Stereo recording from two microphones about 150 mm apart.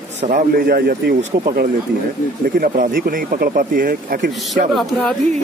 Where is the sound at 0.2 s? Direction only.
65° right (ahead or behind); by 1.7 s 80° right.